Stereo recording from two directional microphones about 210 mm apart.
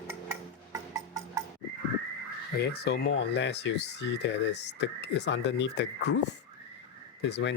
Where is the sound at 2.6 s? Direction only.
50° left (ahead or behind).